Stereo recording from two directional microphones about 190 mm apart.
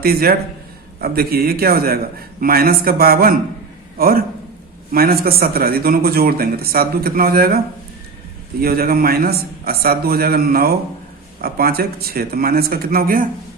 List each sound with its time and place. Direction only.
0.0 s a man's voice: 50° right (ahead or behind)
8.6 s speech: 55° right (ahead or behind)